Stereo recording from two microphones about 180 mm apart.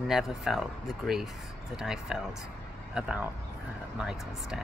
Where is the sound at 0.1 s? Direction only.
Centre (ahead or behind).